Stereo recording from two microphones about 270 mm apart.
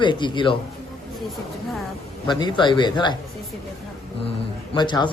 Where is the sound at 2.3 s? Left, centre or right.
Centre.